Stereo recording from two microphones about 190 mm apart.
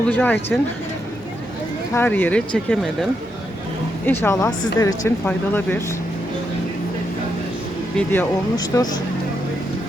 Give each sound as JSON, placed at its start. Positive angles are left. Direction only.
{"t": 0.1, "sound": "speech", "side_deg": 10}
{"t": 1.9, "sound": "speech", "side_deg": 10}
{"t": 7.9, "sound": "speech", "side_deg": 10}
{"t": 8.5, "sound": "speech", "side_deg": 20}